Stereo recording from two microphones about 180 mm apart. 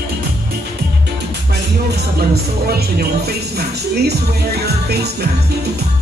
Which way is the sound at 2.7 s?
60° right (ahead or behind).